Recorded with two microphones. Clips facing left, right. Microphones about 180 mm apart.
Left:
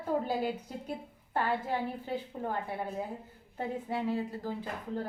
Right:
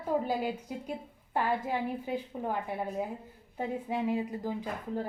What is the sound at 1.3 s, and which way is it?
A woman's voice, 10° right (ahead or behind).